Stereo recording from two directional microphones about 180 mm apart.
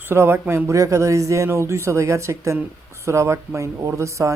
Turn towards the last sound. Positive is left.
turn(degrees=-15)  # may be behind; listen again after turning